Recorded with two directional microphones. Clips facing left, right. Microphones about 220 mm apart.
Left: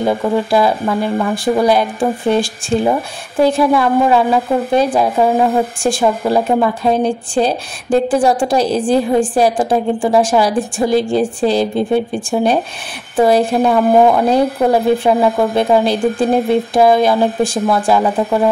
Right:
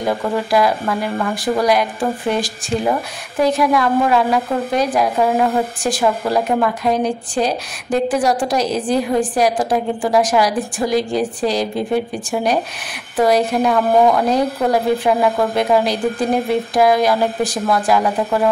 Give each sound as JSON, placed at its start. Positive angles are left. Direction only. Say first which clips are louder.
{"t": 0.0, "sound": "a woman's voice", "louder": "left 4 dB", "side_deg": 25}